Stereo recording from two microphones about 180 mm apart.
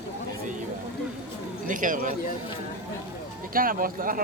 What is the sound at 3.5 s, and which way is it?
Speech, 50° right (ahead or behind).